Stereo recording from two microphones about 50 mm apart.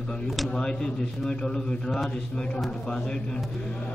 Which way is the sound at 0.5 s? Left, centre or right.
Centre.